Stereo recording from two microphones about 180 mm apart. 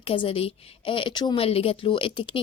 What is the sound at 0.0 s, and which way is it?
Speech, 30° left (ahead or behind).